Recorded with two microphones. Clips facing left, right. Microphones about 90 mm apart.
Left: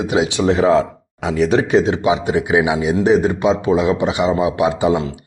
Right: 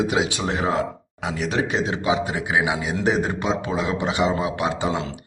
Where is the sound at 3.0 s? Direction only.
Centre (ahead or behind).